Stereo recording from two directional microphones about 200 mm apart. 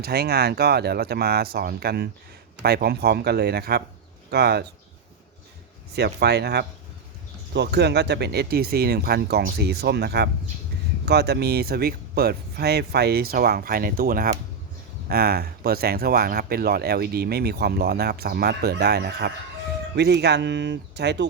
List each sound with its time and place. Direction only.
0.0 s speech: 50° right (ahead or behind)
5.9 s speech: 55° right (ahead or behind)